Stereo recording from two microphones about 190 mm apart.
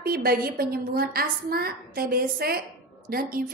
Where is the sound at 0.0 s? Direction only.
55° right (ahead or behind).